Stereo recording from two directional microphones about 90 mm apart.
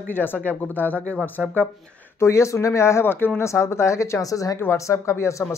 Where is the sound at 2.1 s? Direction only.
35° left (ahead or behind).